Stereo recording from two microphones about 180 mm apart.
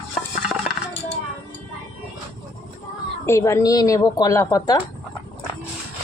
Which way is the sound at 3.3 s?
15° left (ahead or behind).